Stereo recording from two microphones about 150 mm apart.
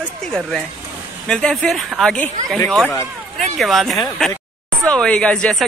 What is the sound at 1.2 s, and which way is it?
Speech, 5° left (ahead or behind).